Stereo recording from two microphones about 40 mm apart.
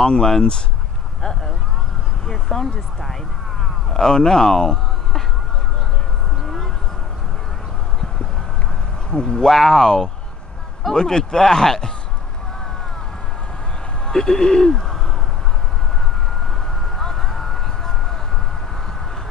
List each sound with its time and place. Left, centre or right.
0.0 s speech: left
2.2 s speech: centre
3.9 s speech: centre
9.1 s speech: left
14.0 s speech: centre
17.0 s a sound: centre